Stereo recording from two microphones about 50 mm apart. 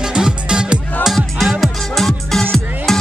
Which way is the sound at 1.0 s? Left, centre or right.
Centre.